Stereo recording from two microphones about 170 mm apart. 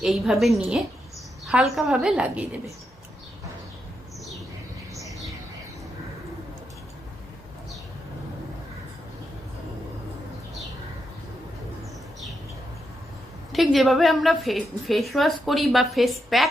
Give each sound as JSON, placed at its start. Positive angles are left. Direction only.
{"t": 0.0, "sound": "a woman's voice", "side_deg": 0}
{"t": 13.5, "sound": "a woman's voice", "side_deg": 0}